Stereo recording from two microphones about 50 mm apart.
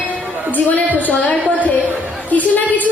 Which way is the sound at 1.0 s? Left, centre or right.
Left.